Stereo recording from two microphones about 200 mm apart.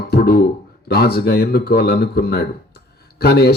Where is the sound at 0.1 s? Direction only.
50° left (ahead or behind).